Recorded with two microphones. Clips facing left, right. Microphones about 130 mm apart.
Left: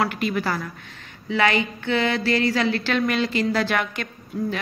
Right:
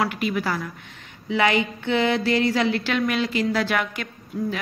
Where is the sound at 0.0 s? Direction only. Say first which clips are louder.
Left 1 dB; 5° right (ahead or behind).